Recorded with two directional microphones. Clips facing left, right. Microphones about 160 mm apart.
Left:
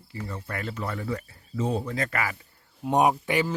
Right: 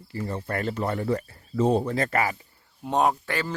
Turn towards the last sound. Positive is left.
turn(degrees=15)  # may be behind; listen again after turning